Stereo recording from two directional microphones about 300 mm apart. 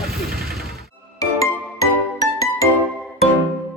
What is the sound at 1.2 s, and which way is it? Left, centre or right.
Music, centre.